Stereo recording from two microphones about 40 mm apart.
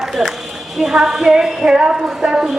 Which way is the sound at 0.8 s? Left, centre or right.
Centre.